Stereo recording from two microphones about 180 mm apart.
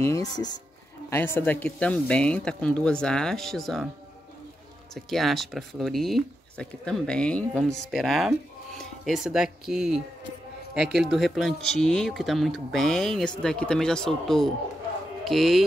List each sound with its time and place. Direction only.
0.0 s speech: 20° left (ahead or behind); by 3.8 s centre (ahead or behind)
4.9 s speech: centre (ahead or behind)